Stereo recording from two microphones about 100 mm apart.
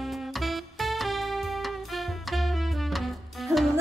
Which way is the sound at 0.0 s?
Centre (ahead or behind).